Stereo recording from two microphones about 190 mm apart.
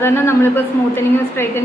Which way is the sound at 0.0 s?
10° left (ahead or behind).